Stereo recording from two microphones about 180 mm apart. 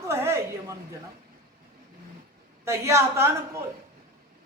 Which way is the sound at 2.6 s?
15° right (ahead or behind).